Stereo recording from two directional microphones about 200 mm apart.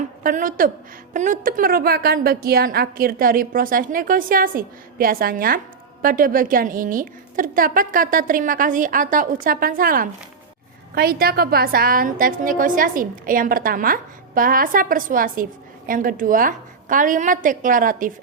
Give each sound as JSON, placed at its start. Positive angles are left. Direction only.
{"t": 0.2, "sound": "a woman's voice", "side_deg": -45}